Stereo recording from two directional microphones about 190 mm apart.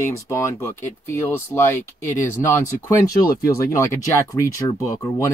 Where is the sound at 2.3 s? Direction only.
15° left (ahead or behind).